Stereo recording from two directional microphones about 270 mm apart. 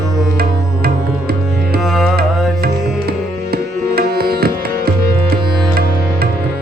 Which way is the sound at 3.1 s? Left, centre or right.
Right.